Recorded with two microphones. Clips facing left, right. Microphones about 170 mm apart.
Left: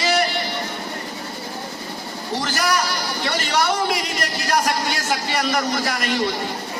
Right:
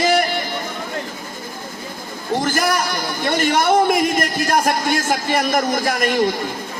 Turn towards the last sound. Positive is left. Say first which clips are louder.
# right 5 dB
turn(degrees=-50)  # may be behind; listen again after turning